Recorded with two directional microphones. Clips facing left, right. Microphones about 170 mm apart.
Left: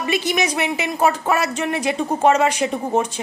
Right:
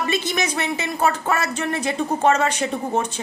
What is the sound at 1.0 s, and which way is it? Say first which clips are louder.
Speech: left 3 dB; 25° left (ahead or behind).